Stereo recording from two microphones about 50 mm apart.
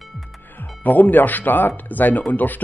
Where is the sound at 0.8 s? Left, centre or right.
Left.